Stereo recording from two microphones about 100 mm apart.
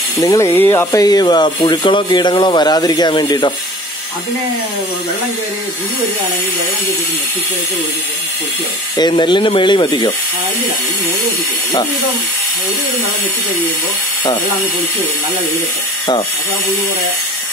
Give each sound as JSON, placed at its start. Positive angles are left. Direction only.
{"t": 0.2, "sound": "speech", "side_deg": 35}
{"t": 1.0, "sound": "speech", "side_deg": 45}
{"t": 9.1, "sound": "speech", "side_deg": 55}